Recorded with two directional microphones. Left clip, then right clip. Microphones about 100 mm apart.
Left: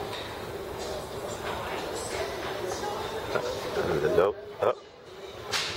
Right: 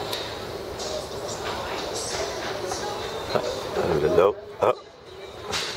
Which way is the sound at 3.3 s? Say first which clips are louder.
Right 4 dB; 25° right (ahead or behind).